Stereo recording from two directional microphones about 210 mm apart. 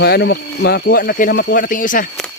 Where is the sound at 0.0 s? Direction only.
50° left (ahead or behind).